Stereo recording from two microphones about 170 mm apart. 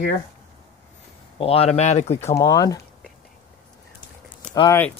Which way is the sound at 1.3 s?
35° left (ahead or behind).